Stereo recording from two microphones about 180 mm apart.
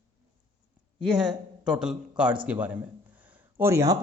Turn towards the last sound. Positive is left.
turn(degrees=-15)  # may be behind; listen again after turning